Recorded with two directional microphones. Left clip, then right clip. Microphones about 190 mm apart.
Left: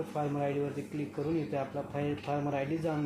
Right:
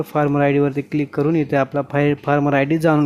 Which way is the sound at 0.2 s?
60° right (ahead or behind).